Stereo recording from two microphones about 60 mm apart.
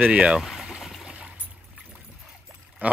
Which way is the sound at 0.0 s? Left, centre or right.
Right.